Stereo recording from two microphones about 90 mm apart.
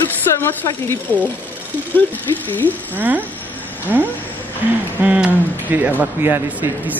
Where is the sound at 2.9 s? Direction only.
20° right (ahead or behind).